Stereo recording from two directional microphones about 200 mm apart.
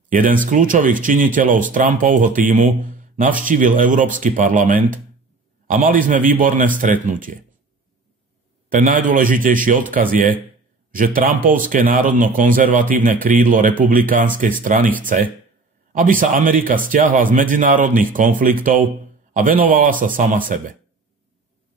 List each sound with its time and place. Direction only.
0.1 s speech: 40° right (ahead or behind)
8.6 s a man's voice: 40° right (ahead or behind)